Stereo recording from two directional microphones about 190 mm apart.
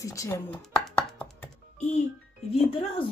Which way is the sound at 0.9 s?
10° left (ahead or behind).